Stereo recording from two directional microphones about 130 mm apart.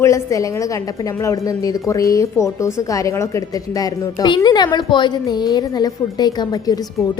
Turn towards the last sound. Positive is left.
turn(degrees=30)  # may be behind; listen again after turning